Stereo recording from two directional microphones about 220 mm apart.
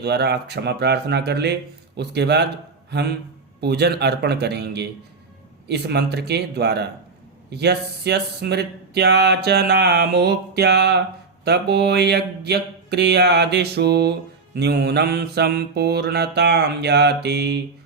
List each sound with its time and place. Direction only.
0.0 s mantra: 50° right (ahead or behind)